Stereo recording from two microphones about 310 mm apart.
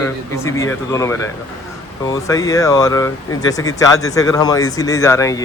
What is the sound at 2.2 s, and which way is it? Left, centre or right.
Speech, centre.